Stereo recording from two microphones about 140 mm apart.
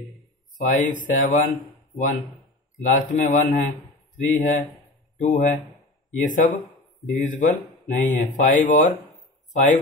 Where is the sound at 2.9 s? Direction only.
65° left (ahead or behind).